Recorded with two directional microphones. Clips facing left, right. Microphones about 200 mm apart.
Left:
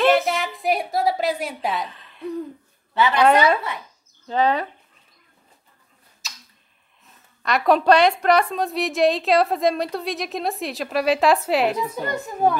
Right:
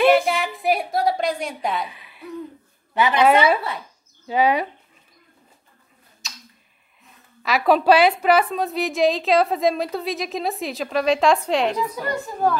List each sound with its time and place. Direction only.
0.1 s a sound: centre (ahead or behind)
1.9 s hoot: 10° right (ahead or behind)
2.9 s a woman's voice: 15° right (ahead or behind)
4.3 s speech: 10° right (ahead or behind)
6.2 s tick-tock: centre (ahead or behind)
7.4 s a woman's voice: centre (ahead or behind)
11.8 s a woman's voice: 25° left (ahead or behind)